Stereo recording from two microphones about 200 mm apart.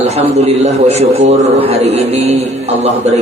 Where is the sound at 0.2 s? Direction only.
30° right (ahead or behind).